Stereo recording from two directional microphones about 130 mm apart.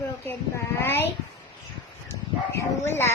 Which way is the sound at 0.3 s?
20° left (ahead or behind).